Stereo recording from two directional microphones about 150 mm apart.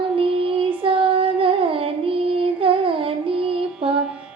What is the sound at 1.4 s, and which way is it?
Music, 35° right (ahead or behind).